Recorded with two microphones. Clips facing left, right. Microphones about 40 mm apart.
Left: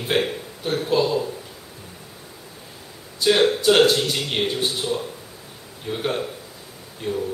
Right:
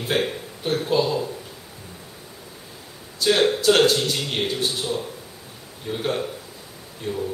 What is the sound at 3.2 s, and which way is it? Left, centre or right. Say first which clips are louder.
A man's voice: left 1 dB; centre.